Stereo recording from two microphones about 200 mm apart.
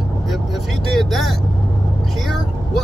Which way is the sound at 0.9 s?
Centre (ahead or behind).